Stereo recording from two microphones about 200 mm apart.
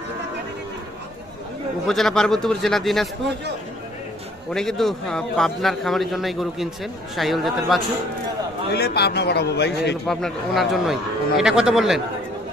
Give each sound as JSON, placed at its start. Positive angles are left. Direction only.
{"t": 1.9, "sound": "a man's voice", "side_deg": 0}
{"t": 4.5, "sound": "a man's voice", "side_deg": 5}
{"t": 8.7, "sound": "a man's voice", "side_deg": 55}
{"t": 10.0, "sound": "a man's voice", "side_deg": 0}